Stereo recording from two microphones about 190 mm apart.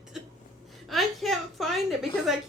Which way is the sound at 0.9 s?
Centre (ahead or behind).